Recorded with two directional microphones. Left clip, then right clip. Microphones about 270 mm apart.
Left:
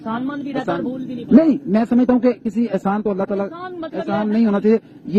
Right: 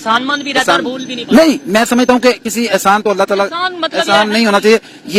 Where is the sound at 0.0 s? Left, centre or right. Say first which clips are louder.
Right 12 dB; centre.